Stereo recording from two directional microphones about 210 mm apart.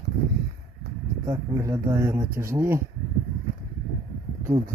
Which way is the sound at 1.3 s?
15° right (ahead or behind).